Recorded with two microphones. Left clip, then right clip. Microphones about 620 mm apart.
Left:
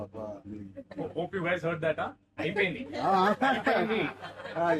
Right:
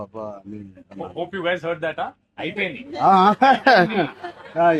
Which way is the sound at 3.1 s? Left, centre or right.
Right.